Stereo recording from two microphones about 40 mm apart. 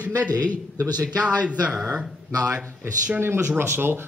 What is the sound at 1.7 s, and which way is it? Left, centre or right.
Speech, centre.